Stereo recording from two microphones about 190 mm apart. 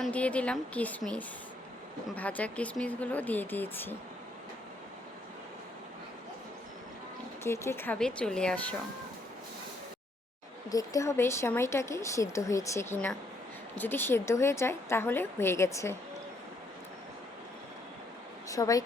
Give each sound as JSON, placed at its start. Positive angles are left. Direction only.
{"t": 0.0, "sound": "speech", "side_deg": 5}
{"t": 7.4, "sound": "speech", "side_deg": 15}
{"t": 10.7, "sound": "speech", "side_deg": 20}
{"t": 18.4, "sound": "speech", "side_deg": 15}